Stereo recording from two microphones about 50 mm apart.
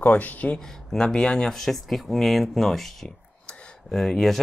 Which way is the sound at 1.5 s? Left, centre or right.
Centre.